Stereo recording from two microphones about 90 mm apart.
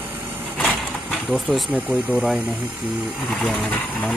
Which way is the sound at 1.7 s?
15° right (ahead or behind).